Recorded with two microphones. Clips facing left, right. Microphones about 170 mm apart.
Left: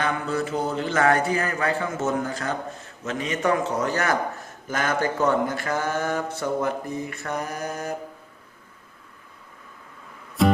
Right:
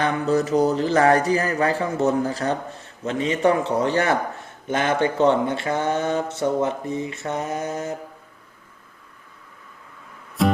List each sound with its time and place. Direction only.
0.0 s speech: 35° right (ahead or behind)
10.4 s music: centre (ahead or behind)